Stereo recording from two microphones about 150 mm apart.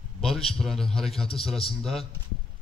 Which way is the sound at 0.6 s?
Centre (ahead or behind).